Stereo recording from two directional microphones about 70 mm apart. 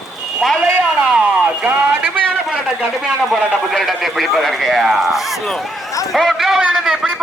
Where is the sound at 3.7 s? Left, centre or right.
Centre.